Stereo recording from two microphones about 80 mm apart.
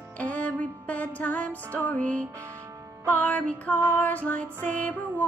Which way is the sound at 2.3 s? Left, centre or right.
Right.